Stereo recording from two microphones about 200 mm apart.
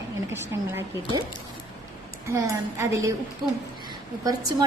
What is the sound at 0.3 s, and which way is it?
Speech, 15° right (ahead or behind).